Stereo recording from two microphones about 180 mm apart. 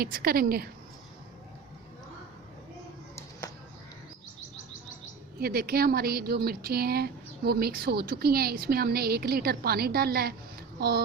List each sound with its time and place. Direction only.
0.0 s speech: 55° right (ahead or behind)
5.4 s speech: 55° right (ahead or behind)